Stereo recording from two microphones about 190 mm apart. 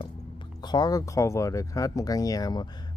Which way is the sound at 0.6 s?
20° left (ahead or behind).